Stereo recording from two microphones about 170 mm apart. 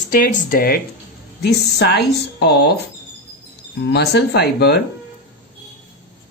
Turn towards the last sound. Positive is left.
turn(degrees=75)  # may be behind; listen again after turning